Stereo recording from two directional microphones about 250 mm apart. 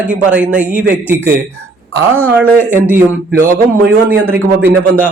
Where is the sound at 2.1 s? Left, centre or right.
Centre.